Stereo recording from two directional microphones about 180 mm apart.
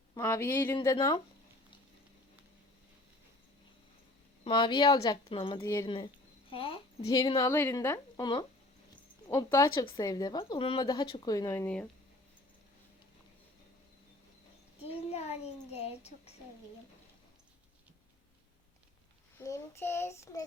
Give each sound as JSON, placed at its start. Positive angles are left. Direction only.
{"t": 0.1, "sound": "child singing", "side_deg": 15}
{"t": 0.8, "sound": "speech", "side_deg": 20}
{"t": 4.4, "sound": "speech", "side_deg": 25}
{"t": 5.5, "sound": "child singing", "side_deg": 15}
{"t": 6.5, "sound": "speech", "side_deg": 30}
{"t": 9.3, "sound": "child singing", "side_deg": 15}
{"t": 9.8, "sound": "speech", "side_deg": 20}
{"t": 14.8, "sound": "a child's voice", "side_deg": 35}
{"t": 19.4, "sound": "child singing", "side_deg": 15}